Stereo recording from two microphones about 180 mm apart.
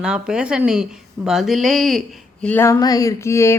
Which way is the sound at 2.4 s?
10° left (ahead or behind).